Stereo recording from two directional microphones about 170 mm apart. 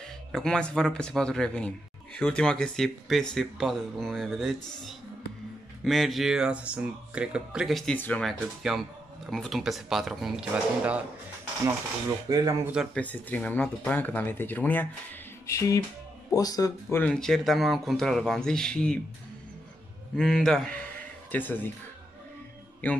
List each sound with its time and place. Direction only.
0.3 s speech: 5° left (ahead or behind)
12.3 s speech: 20° right (ahead or behind)
12.9 s speech: 10° left (ahead or behind)
15.4 s music: 15° left (ahead or behind)
16.3 s speech: 20° left (ahead or behind)
17.0 s speech: 5° left (ahead or behind)
20.2 s speech: 5° left (ahead or behind)